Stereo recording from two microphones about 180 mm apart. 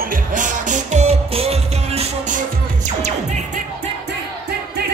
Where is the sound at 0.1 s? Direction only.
45° right (ahead or behind).